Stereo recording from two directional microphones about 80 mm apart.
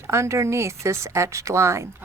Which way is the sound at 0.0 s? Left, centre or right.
Right.